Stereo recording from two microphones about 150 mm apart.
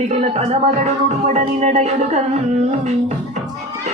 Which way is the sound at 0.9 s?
50° right (ahead or behind).